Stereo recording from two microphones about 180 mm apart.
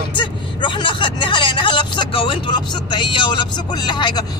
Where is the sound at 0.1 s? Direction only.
25° left (ahead or behind).